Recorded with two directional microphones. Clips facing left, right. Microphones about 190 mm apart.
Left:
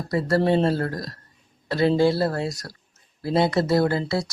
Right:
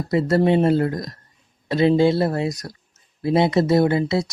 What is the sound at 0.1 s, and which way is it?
Speech, 20° right (ahead or behind).